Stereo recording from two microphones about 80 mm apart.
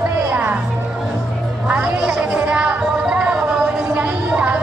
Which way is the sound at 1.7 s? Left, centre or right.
Centre.